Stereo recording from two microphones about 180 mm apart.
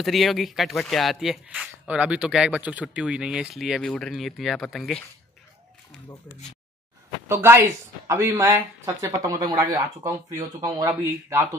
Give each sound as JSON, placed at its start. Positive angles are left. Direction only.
{"t": 0.0, "sound": "speech", "side_deg": 0}
{"t": 7.2, "sound": "speech", "side_deg": -15}